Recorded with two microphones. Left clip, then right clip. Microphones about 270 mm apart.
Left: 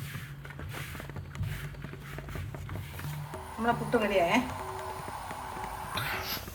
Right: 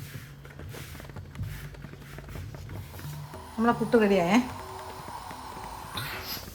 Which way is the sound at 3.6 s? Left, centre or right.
Right.